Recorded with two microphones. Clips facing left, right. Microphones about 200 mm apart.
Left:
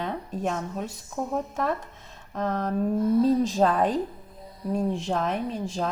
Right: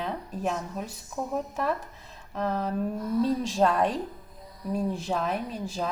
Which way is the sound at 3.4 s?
Centre (ahead or behind).